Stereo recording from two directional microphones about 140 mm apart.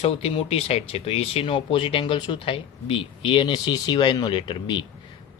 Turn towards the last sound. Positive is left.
turn(degrees=35)  # may be behind; listen again after turning